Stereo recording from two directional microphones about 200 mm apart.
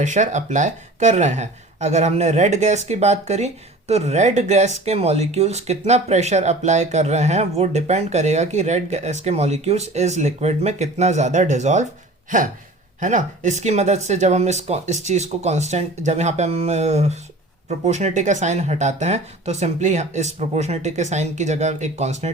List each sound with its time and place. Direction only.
0.0 s speech: 35° right (ahead or behind)